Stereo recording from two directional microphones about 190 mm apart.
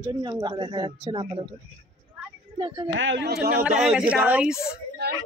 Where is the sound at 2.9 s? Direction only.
70° right (ahead or behind).